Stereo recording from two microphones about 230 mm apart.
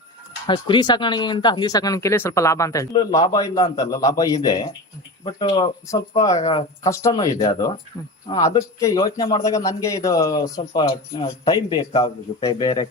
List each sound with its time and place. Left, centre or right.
0.4 s speech: centre